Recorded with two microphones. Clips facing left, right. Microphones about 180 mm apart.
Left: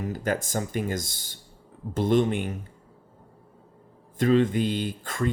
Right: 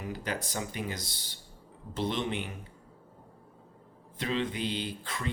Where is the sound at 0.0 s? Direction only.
45° left (ahead or behind).